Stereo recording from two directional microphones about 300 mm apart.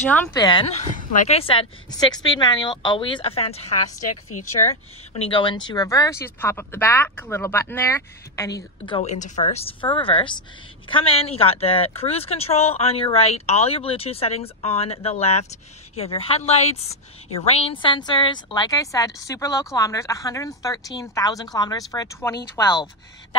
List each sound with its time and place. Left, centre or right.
0.1 s speech: centre
4.1 s a woman's voice: left
5.1 s speech: centre